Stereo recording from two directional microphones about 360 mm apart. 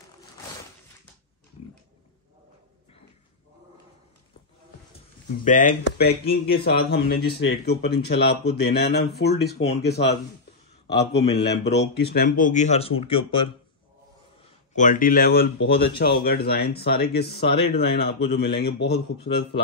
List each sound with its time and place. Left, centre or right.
5.4 s speech: left
14.8 s speech: left